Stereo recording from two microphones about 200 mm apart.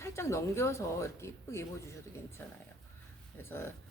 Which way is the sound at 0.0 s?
15° left (ahead or behind).